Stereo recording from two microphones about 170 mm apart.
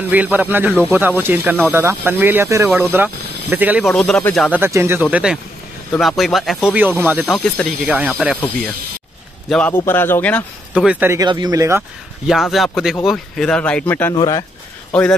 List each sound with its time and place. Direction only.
0.1 s speech: 10° right (ahead or behind)
3.9 s speech: centre (ahead or behind)
4.4 s speech: 10° right (ahead or behind)
5.1 s speech: 5° right (ahead or behind)
7.2 s speech: 5° left (ahead or behind)
9.5 s speech: 10° left (ahead or behind)
10.7 s speech: 5° right (ahead or behind)
11.1 s speech: 25° right (ahead or behind)
12.3 s speech: centre (ahead or behind)
14.1 s speech: 20° left (ahead or behind)
14.9 s speech: 5° left (ahead or behind)